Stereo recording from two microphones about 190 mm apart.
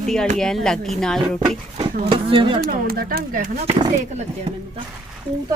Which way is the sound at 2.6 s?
55° right (ahead or behind).